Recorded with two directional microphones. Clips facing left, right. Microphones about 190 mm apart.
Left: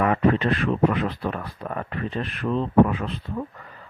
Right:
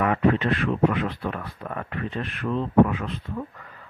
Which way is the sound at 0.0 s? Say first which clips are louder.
Left 1 dB; 35° left (ahead or behind).